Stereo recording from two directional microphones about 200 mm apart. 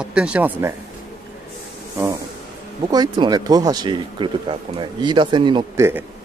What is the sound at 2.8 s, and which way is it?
Speech, 20° right (ahead or behind).